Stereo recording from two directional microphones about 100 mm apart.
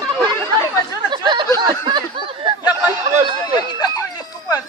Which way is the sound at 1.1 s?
50° right (ahead or behind).